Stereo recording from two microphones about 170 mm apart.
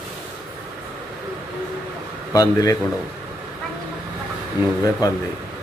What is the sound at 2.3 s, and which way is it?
Speech, 20° left (ahead or behind).